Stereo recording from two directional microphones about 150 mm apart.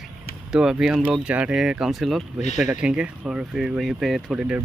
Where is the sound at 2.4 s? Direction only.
50° left (ahead or behind).